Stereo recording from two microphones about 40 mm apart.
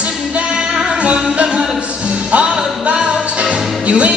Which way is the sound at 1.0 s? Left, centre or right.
Right.